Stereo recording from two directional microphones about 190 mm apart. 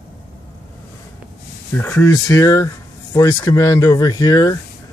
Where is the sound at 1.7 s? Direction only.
10° left (ahead or behind).